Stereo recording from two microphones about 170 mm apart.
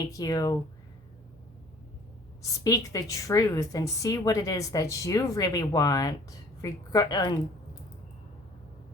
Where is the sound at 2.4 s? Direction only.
20° left (ahead or behind).